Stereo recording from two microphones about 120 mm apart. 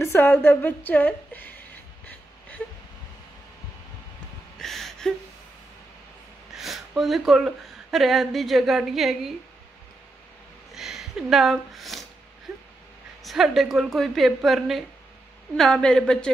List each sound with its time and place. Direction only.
0.0 s a woman's voice: 20° left (ahead or behind)
4.6 s gasp: 5° left (ahead or behind)
6.5 s a sound: centre (ahead or behind)
7.0 s a woman's voice: centre (ahead or behind)
10.7 s speech: 5° right (ahead or behind)
12.5 s a sound: 5° right (ahead or behind)
13.2 s a woman's voice: centre (ahead or behind)